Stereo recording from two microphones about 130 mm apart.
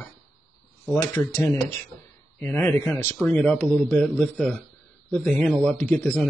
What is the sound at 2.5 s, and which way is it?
A man's voice, 5° left (ahead or behind).